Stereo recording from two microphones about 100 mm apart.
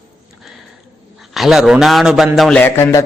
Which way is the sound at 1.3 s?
Centre (ahead or behind).